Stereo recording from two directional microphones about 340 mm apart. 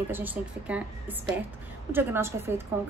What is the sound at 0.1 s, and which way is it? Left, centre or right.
A woman's voice, centre.